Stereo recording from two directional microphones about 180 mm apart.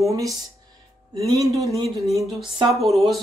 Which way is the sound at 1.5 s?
20° right (ahead or behind).